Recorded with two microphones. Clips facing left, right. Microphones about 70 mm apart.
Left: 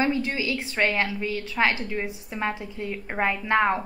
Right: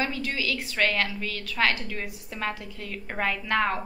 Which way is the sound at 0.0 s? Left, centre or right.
Left.